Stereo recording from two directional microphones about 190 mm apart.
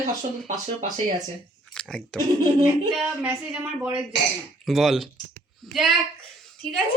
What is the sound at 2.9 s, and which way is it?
Speech, 5° right (ahead or behind).